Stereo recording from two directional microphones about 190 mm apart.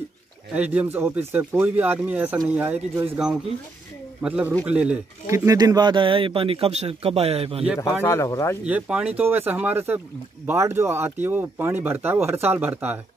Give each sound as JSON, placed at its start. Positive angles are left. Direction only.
{"t": 0.6, "sound": "speech", "side_deg": -10}
{"t": 8.0, "sound": "speech", "side_deg": 15}
{"t": 8.6, "sound": "speech", "side_deg": -5}